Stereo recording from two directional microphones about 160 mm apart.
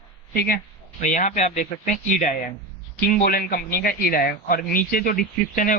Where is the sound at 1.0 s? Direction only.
50° left (ahead or behind).